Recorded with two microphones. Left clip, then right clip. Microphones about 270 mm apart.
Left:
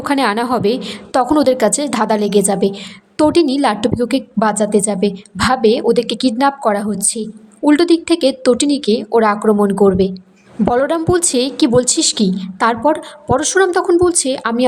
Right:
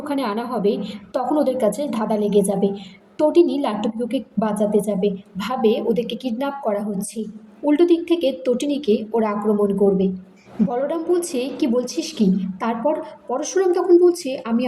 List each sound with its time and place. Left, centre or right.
0.0 s a woman's voice: left
12.8 s a woman's voice: left